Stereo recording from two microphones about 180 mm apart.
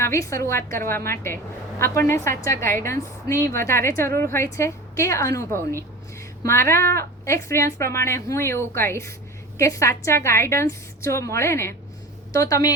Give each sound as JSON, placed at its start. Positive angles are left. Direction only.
{"t": 0.0, "sound": "a woman's voice", "side_deg": 15}